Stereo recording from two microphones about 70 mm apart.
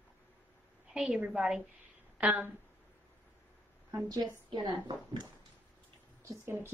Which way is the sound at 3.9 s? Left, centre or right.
Right.